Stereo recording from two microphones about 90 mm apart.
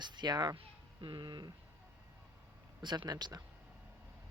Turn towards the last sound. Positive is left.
turn(degrees=-50)  # may be behind; listen again after turning